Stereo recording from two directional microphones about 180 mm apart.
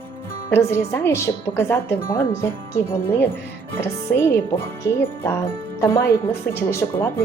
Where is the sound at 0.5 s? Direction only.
15° left (ahead or behind).